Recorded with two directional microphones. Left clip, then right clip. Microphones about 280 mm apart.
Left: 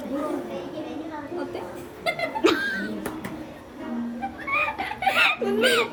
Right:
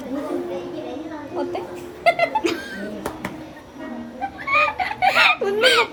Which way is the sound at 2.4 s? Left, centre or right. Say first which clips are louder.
Left 3 dB; centre.